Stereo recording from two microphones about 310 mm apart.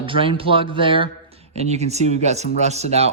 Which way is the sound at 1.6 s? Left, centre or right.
Right.